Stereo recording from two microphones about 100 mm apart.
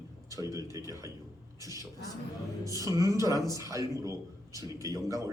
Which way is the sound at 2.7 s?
35° right (ahead or behind).